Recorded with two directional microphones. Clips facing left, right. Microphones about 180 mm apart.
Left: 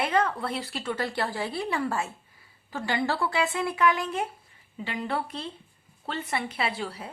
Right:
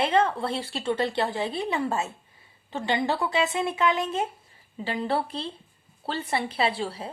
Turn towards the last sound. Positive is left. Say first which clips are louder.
# right 4 dB
turn(degrees=-30)  # may be behind; listen again after turning